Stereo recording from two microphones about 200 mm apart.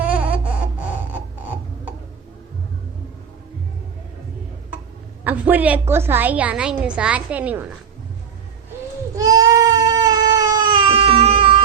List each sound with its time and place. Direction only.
0.0 s a sound: 5° right (ahead or behind)
5.2 s a woman's voice: 10° right (ahead or behind)
9.1 s baby cry: 20° right (ahead or behind)